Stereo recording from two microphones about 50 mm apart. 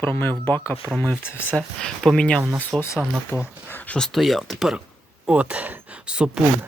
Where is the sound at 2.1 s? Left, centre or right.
Centre.